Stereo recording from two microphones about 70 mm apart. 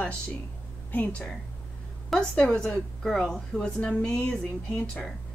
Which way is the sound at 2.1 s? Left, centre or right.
Centre.